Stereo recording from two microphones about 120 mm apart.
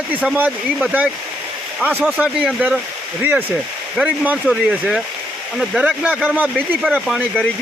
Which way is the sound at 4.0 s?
10° right (ahead or behind).